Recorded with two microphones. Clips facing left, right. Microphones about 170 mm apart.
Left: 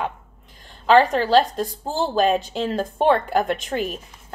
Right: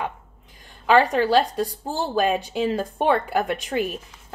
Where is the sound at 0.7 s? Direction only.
10° right (ahead or behind).